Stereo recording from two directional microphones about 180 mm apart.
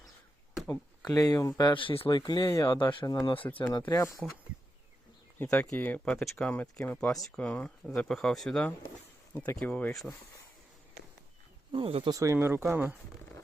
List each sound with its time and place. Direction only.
0.7 s speech: 20° left (ahead or behind)
2.7 s speech: 25° left (ahead or behind)
3.8 s speech: 15° left (ahead or behind)
5.4 s speech: 5° left (ahead or behind)
11.7 s speech: 30° right (ahead or behind)
12.1 s speech: 15° right (ahead or behind)